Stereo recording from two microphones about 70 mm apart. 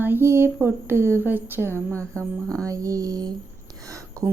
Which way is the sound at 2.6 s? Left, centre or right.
Right.